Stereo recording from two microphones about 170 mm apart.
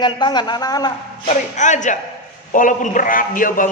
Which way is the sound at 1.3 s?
45° left (ahead or behind).